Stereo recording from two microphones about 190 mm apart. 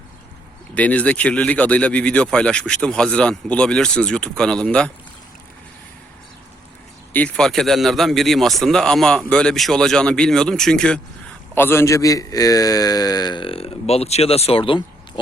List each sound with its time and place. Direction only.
0.7 s speech: 5° left (ahead or behind)
7.1 s a man's voice: 5° left (ahead or behind); by 15.2 s 25° left (ahead or behind)